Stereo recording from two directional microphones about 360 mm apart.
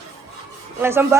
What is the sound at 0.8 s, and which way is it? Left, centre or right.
Speech, centre.